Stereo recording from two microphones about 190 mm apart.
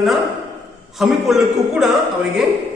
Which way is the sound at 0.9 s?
Centre (ahead or behind).